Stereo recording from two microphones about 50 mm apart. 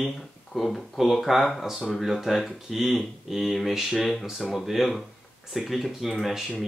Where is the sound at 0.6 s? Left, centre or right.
Centre.